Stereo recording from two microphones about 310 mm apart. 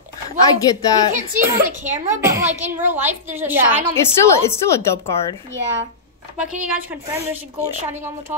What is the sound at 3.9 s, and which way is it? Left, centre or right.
Speech, centre.